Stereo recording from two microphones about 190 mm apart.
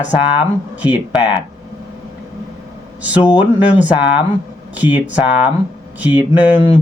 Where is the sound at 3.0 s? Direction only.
5° right (ahead or behind).